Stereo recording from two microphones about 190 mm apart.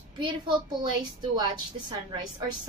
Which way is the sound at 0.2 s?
25° right (ahead or behind).